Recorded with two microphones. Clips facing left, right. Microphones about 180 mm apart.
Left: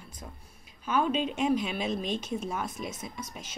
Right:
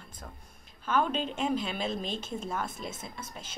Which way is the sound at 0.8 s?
10° left (ahead or behind).